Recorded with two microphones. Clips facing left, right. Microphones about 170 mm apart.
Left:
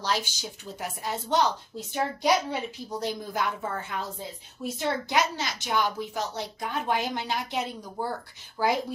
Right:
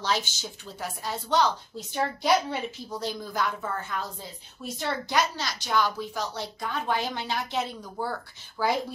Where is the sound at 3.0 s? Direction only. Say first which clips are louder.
Even; 25° left (ahead or behind).